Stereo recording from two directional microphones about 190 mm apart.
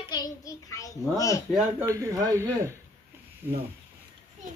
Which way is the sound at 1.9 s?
15° right (ahead or behind).